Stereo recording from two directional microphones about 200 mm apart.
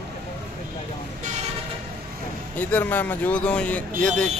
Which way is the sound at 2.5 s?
10° left (ahead or behind).